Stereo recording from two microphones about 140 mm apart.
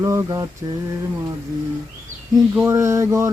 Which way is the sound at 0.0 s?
20° right (ahead or behind).